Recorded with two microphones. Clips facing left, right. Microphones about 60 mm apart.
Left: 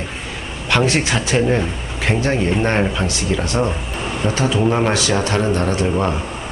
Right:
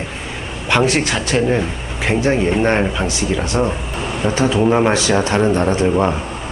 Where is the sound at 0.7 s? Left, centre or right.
Centre.